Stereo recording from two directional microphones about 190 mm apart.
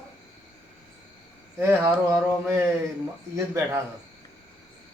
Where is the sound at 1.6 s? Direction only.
10° right (ahead or behind).